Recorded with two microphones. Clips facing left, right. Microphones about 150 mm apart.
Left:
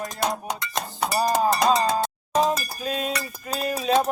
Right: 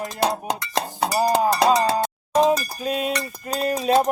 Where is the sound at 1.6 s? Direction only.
30° right (ahead or behind).